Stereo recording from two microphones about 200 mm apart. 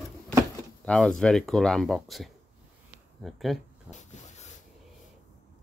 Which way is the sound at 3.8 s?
35° left (ahead or behind).